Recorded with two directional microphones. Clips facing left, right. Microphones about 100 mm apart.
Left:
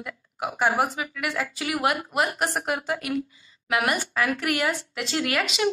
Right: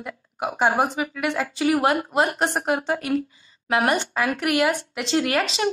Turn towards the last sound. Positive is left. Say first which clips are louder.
# right 2 dB
turn(degrees=-35)  # may be behind; listen again after turning